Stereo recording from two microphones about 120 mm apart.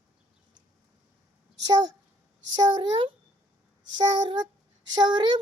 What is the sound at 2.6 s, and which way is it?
A child's voice, 35° right (ahead or behind).